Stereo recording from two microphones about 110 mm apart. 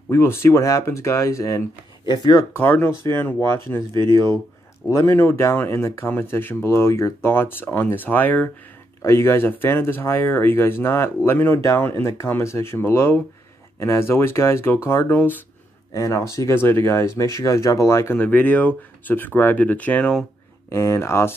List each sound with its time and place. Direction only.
0.1 s speech: 25° left (ahead or behind)
2.5 s speech: 15° left (ahead or behind)
15.9 s speech: 30° left (ahead or behind)
18.1 s speech: 15° left (ahead or behind)
20.7 s speech: 25° left (ahead or behind)